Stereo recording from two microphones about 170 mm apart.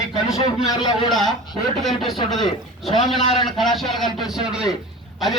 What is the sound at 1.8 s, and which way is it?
Speech, centre (ahead or behind).